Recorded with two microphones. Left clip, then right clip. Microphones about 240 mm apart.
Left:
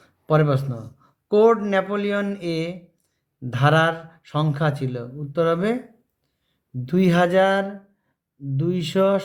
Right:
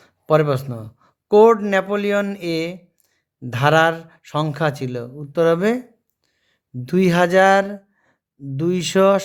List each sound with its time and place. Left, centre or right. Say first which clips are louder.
0.0 s speech: right 4 dB; right
6.8 s speech: right 3 dB; right